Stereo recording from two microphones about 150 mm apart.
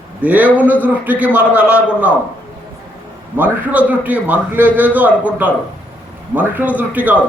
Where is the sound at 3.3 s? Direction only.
10° right (ahead or behind).